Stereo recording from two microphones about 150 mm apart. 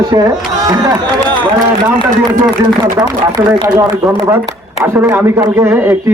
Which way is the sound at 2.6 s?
25° right (ahead or behind).